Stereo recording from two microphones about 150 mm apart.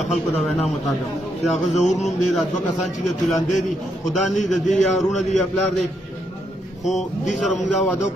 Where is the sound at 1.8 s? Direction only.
Centre (ahead or behind).